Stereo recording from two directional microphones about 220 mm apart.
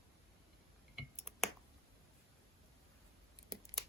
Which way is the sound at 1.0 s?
Centre (ahead or behind).